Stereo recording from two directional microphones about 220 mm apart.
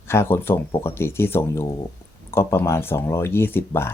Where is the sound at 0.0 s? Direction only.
10° left (ahead or behind).